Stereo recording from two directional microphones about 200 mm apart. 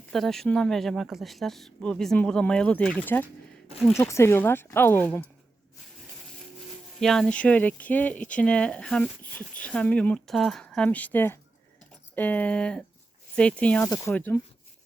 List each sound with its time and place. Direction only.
0.1 s speech: centre (ahead or behind)
7.0 s speech: centre (ahead or behind)